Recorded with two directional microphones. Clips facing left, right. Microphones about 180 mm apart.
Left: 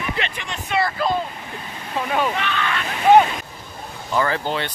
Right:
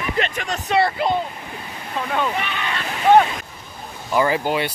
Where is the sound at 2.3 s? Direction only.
15° right (ahead or behind).